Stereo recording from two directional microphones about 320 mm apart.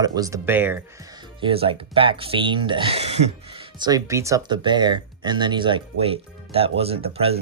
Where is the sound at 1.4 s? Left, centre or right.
Centre.